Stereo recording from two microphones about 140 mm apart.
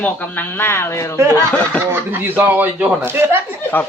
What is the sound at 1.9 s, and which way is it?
Speech, 15° right (ahead or behind).